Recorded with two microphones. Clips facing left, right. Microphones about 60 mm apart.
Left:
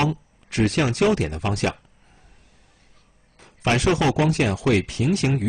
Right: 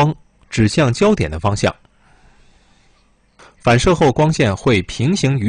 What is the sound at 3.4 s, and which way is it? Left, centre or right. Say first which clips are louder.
Speech: right 7 dB; right.